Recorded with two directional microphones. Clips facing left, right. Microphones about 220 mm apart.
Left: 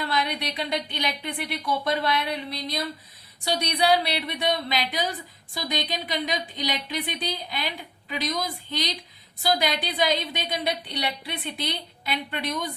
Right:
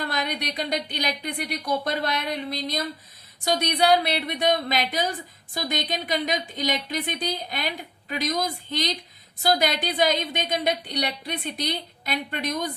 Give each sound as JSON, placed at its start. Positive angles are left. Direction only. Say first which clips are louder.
{"t": 0.0, "sound": "a woman's voice", "louder": "left 1 dB", "side_deg": -45}